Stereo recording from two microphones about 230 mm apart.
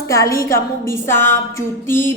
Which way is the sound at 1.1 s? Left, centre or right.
Left.